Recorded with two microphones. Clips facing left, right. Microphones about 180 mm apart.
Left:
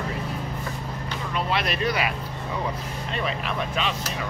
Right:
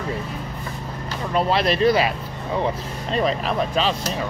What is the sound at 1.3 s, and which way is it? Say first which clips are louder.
Speech: right 7 dB; 35° right (ahead or behind).